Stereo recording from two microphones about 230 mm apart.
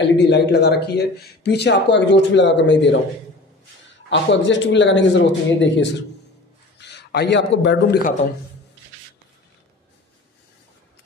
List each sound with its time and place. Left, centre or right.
0.0 s speech: left
4.1 s a man's voice: left